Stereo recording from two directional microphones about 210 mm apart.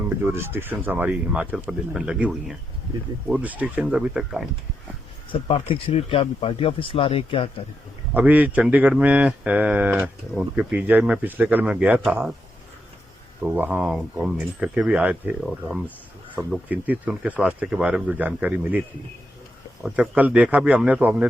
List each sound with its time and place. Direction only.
0.3 s speech: 10° right (ahead or behind)
5.3 s speech: 25° left (ahead or behind)
8.1 s speech: 5° right (ahead or behind)
13.4 s speech: 5° right (ahead or behind)